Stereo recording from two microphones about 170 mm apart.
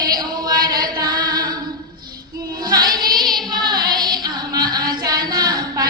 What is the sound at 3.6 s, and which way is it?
Music, 25° right (ahead or behind).